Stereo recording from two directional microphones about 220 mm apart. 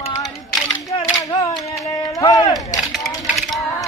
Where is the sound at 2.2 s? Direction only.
15° left (ahead or behind).